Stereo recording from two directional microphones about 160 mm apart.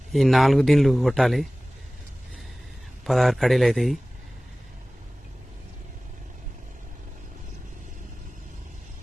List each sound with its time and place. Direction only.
0.1 s speech: centre (ahead or behind)
3.0 s speech: centre (ahead or behind)